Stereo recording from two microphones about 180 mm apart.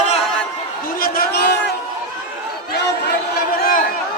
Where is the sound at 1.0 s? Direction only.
60° left (ahead or behind).